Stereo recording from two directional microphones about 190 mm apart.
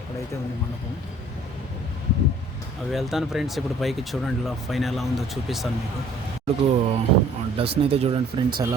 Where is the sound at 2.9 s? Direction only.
Centre (ahead or behind).